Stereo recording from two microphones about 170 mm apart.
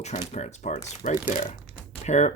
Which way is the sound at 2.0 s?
45° left (ahead or behind).